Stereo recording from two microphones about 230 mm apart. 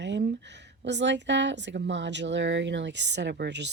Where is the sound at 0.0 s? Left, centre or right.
Right.